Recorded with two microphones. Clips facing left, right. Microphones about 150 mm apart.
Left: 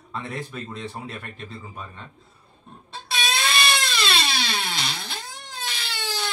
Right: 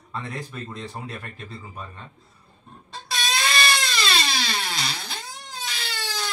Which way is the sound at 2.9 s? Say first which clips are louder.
Left 1 dB; centre (ahead or behind).